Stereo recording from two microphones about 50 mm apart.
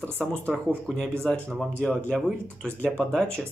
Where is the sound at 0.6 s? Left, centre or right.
Centre.